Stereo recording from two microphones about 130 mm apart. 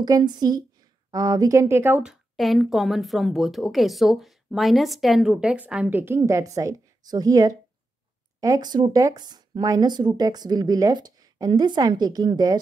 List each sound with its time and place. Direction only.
0.0 s speech: 35° right (ahead or behind); by 2.1 s 15° right (ahead or behind)
2.3 s a woman's voice: centre (ahead or behind); by 12.5 s 30° right (ahead or behind)